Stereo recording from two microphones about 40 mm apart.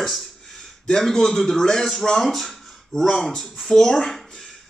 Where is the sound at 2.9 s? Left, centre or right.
Centre.